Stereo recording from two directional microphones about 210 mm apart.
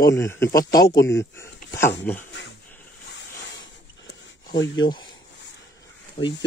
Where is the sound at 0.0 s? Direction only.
15° left (ahead or behind).